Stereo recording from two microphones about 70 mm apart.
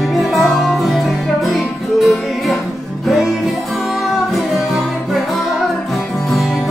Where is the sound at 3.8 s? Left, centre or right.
Centre.